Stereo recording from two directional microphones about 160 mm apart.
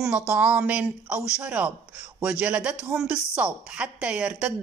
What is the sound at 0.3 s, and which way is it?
A woman's voice, 10° right (ahead or behind).